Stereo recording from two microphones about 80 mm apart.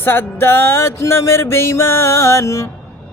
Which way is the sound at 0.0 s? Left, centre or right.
Left.